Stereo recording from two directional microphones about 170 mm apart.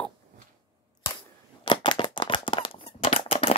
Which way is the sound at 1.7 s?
30° left (ahead or behind).